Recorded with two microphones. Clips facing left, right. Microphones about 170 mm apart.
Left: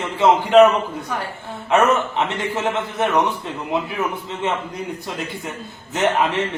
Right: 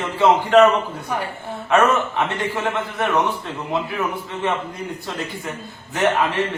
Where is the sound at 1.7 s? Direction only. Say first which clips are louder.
Even; 20° left (ahead or behind).